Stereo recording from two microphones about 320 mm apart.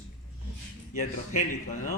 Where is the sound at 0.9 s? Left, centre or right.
Left.